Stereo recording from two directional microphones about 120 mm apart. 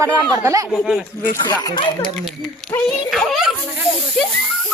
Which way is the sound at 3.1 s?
Centre (ahead or behind).